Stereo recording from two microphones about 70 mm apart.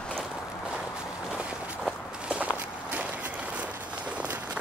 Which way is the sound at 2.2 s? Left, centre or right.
Centre.